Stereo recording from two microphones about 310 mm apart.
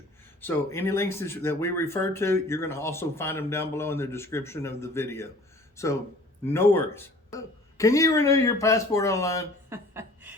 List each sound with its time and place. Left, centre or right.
0.4 s speech: centre
9.6 s chuckle: centre